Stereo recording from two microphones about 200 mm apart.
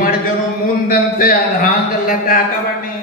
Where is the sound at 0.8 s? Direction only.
45° left (ahead or behind).